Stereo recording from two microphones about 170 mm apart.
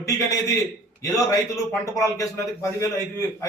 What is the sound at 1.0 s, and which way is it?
A man's voice, 20° left (ahead or behind).